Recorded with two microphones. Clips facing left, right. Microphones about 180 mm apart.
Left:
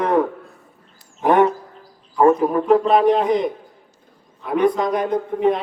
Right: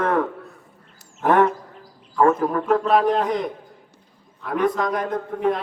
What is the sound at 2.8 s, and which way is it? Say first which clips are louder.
Speech: left 3 dB; centre (ahead or behind).